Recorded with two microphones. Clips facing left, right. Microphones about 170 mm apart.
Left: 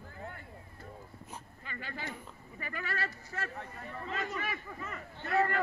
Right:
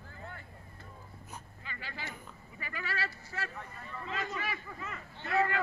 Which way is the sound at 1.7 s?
50° left (ahead or behind).